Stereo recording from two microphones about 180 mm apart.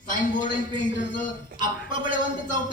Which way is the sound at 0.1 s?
45° left (ahead or behind).